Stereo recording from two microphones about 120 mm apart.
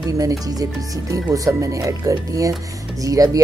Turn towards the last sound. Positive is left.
turn(degrees=-30)  # may be behind; listen again after turning